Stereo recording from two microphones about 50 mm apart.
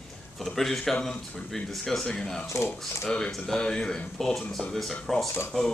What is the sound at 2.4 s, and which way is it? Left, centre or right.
Speech, left.